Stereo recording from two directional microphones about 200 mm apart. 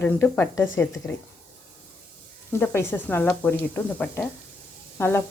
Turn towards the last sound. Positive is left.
turn(degrees=10)  # may be behind; listen again after turning